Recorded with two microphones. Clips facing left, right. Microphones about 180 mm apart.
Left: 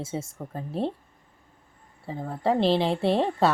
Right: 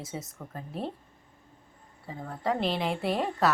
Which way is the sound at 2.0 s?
30° left (ahead or behind).